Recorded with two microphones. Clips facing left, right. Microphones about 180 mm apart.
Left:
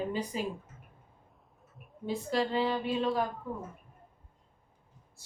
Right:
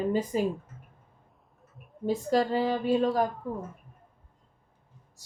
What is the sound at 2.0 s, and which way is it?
A woman's voice, 45° right (ahead or behind).